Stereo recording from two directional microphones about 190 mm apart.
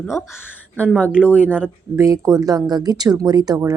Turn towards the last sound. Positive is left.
turn(degrees=-20)  # may be behind; listen again after turning